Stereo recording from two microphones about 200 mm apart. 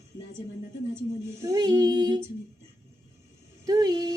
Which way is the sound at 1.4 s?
20° right (ahead or behind).